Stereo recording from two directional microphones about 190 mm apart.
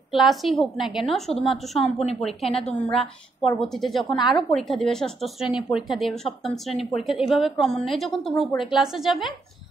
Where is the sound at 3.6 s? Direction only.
Centre (ahead or behind).